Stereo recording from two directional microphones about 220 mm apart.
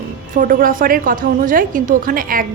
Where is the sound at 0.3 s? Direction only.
40° right (ahead or behind).